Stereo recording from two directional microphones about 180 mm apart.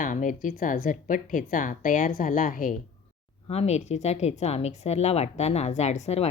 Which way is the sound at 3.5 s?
35° left (ahead or behind).